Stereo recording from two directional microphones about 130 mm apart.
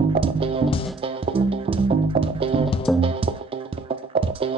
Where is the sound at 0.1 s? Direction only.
45° right (ahead or behind).